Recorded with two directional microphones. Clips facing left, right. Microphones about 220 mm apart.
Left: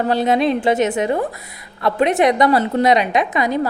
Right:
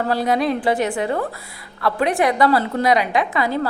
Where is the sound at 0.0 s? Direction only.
20° left (ahead or behind).